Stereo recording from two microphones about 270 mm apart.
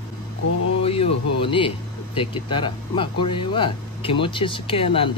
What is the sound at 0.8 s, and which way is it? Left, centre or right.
Speech, left.